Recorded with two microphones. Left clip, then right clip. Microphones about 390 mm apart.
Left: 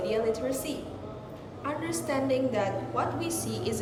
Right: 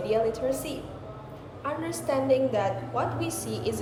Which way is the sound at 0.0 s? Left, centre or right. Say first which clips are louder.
Right 2 dB; centre.